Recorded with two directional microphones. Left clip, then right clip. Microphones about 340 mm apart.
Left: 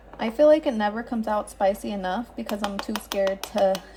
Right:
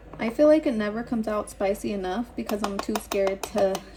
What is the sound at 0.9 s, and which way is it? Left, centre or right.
Speech, left.